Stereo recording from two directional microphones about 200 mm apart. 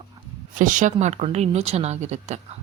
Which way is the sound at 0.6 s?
40° right (ahead or behind).